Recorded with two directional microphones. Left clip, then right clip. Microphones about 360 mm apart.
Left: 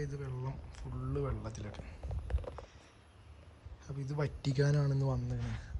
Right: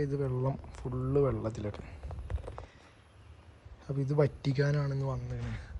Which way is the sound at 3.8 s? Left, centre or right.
Centre.